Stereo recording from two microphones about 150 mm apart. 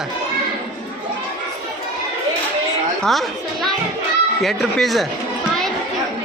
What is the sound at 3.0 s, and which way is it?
Speech, centre (ahead or behind).